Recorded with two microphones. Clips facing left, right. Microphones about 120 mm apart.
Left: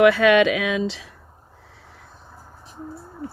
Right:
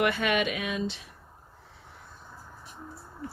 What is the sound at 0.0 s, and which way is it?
Speech, 90° left.